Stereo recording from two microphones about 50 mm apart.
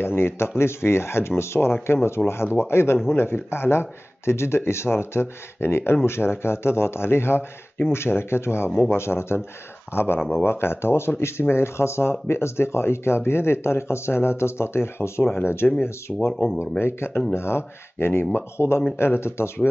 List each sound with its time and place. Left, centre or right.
0.0 s speech: left
8.9 s speech: left
16.1 s speech: centre
16.8 s speech: left